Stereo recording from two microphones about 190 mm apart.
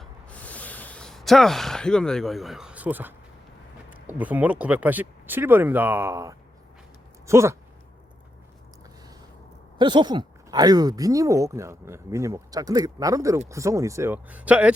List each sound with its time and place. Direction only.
0.0 s a sound: 5° left (ahead or behind); by 3.2 s 10° right (ahead or behind)
3.8 s speech: 10° right (ahead or behind)
9.7 s speech: 25° right (ahead or behind); by 14.7 s 5° right (ahead or behind)